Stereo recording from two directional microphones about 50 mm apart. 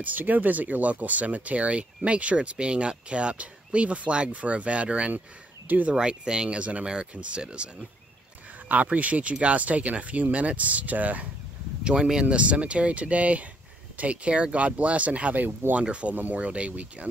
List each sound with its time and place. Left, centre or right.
0.0 s speech: right
5.9 s speech: centre
8.9 s speech: right
11.8 s speech: centre